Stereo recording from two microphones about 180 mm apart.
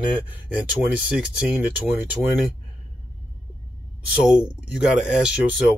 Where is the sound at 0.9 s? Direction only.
5° right (ahead or behind).